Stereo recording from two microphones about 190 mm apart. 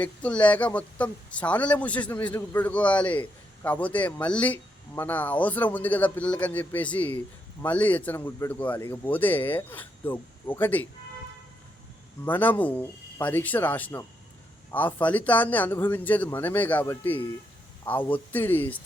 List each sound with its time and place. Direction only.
0.0 s speech: 5° left (ahead or behind)
12.2 s speech: 10° left (ahead or behind)